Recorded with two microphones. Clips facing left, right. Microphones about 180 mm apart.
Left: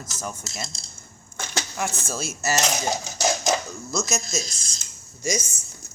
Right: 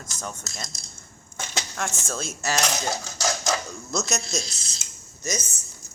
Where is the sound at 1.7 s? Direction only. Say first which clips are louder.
Left 2 dB; 5° left (ahead or behind).